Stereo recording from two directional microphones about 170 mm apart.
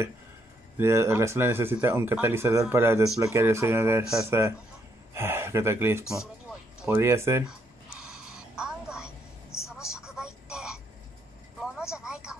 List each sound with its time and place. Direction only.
0.7 s speech: 15° right (ahead or behind)
8.0 s a sound: 5° right (ahead or behind)
9.7 s telephone: 5° right (ahead or behind)
11.6 s vehicle: 5° right (ahead or behind)